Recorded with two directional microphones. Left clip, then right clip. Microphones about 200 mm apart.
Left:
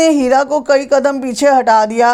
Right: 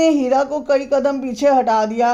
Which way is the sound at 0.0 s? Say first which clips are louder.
Left 4 dB; 15° left (ahead or behind).